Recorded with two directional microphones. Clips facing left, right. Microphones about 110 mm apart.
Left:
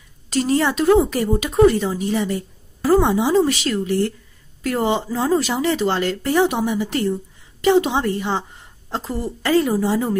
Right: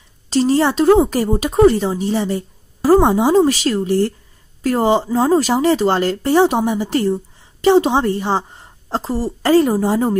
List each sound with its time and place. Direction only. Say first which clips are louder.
0.3 s a woman's voice: right 4 dB; 30° right (ahead or behind)